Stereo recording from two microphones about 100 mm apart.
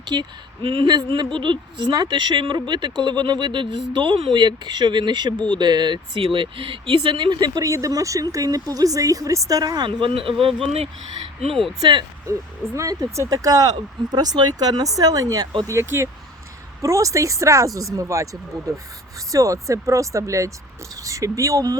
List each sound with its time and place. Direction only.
0.0 s speech: 50° right (ahead or behind); by 0.9 s 65° right (ahead or behind)
1.1 s speech: 55° right (ahead or behind)
6.2 s speech: 65° right (ahead or behind); by 9.9 s 40° right (ahead or behind)
10.0 s speech: 65° right (ahead or behind)
10.4 s speech: 80° right
11.8 s speech: 50° right (ahead or behind)
12.3 s speech: 30° right (ahead or behind)